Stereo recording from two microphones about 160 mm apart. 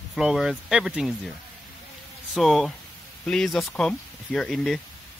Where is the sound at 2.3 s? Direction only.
Centre (ahead or behind).